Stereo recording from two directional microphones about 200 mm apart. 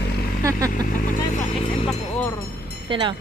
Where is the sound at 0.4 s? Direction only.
15° right (ahead or behind).